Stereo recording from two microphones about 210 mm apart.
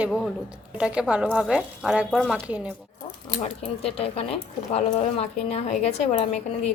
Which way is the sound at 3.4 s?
30° left (ahead or behind).